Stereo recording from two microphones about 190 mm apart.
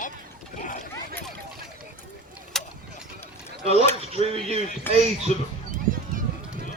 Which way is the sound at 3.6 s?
35° right (ahead or behind).